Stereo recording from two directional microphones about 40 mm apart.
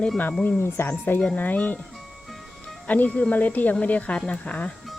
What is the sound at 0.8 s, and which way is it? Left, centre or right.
Speech, left.